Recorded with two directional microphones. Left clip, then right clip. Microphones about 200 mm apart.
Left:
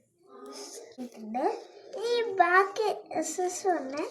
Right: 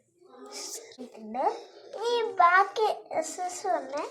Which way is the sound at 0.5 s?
50° right (ahead or behind).